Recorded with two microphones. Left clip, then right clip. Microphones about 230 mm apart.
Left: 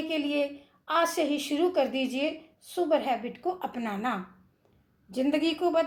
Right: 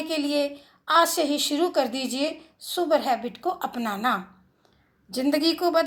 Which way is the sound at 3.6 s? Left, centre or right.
Right.